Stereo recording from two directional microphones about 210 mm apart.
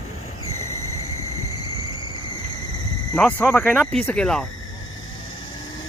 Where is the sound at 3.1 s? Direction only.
5° left (ahead or behind).